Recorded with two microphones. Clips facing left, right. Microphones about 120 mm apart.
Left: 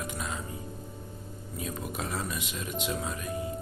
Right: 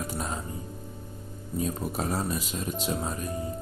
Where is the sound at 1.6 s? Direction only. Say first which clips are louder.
Right 6 dB; 35° right (ahead or behind).